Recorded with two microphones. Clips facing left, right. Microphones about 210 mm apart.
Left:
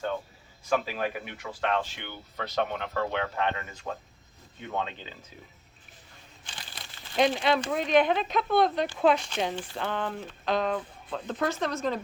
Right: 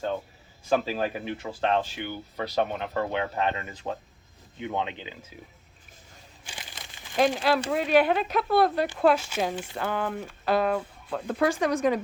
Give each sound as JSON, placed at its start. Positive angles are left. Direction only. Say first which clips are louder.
{"t": 0.7, "sound": "speech", "louder": "right 3 dB", "side_deg": -30}
{"t": 2.0, "sound": "speech", "louder": "right 5 dB", "side_deg": -10}
{"t": 6.4, "sound": "crumpling", "louder": "right 2 dB", "side_deg": -10}
{"t": 7.2, "sound": "speech", "louder": "right 1 dB", "side_deg": -5}